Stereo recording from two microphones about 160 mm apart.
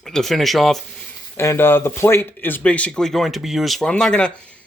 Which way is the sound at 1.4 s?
15° left (ahead or behind).